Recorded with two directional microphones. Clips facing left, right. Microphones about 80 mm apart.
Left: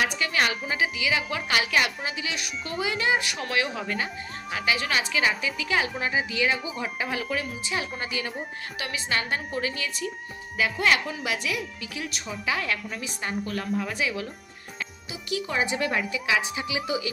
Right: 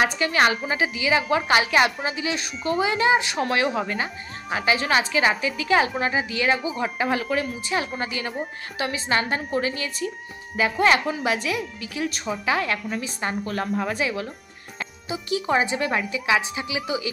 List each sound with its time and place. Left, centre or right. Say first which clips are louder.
0.0 s a woman's voice: right 5 dB; right
8.7 s a woman's voice: right 6 dB; right